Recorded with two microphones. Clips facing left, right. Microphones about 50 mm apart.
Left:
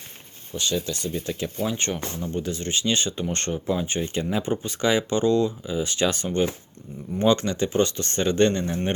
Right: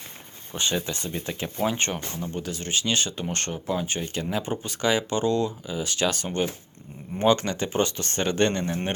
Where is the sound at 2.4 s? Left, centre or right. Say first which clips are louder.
Left 2 dB; centre.